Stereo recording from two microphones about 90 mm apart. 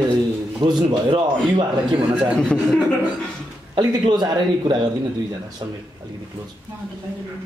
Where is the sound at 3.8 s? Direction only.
55° right (ahead or behind).